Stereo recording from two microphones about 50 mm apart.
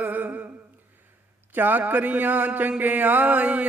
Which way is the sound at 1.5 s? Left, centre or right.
Right.